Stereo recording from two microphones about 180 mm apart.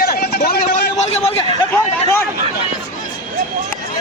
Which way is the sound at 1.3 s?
10° left (ahead or behind).